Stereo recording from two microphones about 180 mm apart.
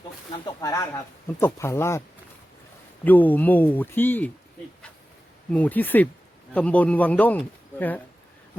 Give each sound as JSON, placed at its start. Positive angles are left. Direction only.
{"t": 0.4, "sound": "speech", "side_deg": 20}
{"t": 3.0, "sound": "speech", "side_deg": 10}
{"t": 5.5, "sound": "speech", "side_deg": 10}